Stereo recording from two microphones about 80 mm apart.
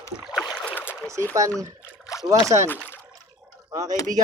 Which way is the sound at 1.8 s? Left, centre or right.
Left.